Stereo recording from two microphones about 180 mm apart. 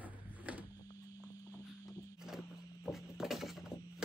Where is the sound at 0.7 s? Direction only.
20° left (ahead or behind).